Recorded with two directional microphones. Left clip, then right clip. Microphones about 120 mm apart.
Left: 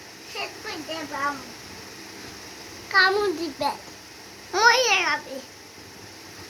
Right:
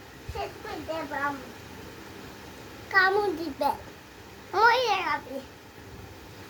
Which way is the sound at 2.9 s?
30° right (ahead or behind).